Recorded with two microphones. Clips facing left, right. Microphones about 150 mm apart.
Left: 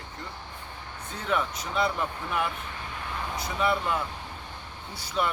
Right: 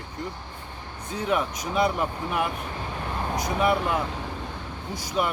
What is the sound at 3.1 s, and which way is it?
Vehicle, 40° right (ahead or behind).